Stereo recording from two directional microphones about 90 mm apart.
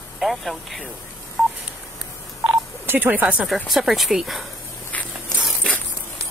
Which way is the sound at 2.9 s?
20° right (ahead or behind).